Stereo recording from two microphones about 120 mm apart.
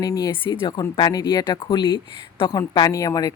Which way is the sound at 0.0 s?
30° left (ahead or behind).